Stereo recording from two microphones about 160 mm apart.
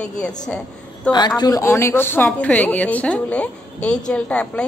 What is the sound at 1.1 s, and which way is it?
A woman's voice, 25° left (ahead or behind).